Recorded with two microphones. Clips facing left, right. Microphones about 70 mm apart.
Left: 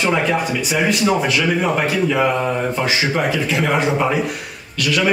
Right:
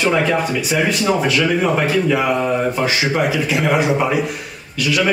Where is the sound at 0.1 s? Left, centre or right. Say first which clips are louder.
Right 1 dB; centre.